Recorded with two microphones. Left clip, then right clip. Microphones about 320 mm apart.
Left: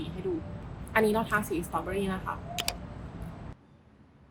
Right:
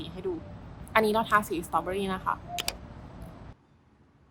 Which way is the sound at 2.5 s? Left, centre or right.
Centre.